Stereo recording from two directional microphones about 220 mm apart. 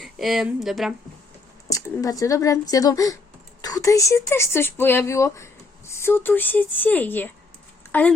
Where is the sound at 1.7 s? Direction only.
15° left (ahead or behind).